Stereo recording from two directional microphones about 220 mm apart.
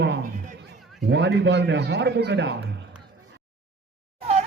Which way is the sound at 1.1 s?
50° right (ahead or behind).